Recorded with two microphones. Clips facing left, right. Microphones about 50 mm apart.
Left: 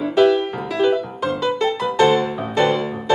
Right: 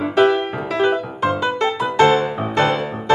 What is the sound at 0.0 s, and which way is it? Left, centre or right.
Music, right.